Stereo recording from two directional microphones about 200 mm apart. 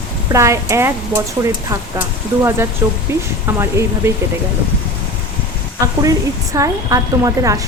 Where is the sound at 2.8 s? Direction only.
10° right (ahead or behind).